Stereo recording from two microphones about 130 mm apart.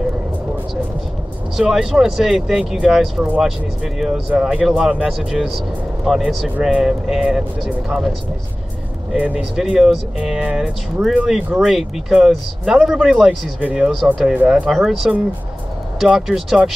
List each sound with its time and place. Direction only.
1.6 s speech: 5° right (ahead or behind)
9.1 s speech: 10° right (ahead or behind)